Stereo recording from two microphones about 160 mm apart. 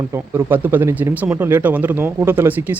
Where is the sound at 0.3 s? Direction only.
10° right (ahead or behind).